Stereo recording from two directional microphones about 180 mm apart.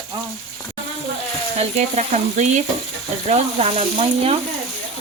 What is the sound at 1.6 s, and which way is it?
Frying, 35° right (ahead or behind).